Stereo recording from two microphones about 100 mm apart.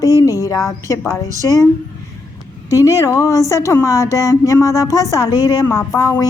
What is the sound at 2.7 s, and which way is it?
A woman's voice, 35° left (ahead or behind).